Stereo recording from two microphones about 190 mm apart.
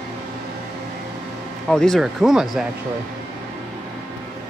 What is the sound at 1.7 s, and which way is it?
Speech, centre (ahead or behind).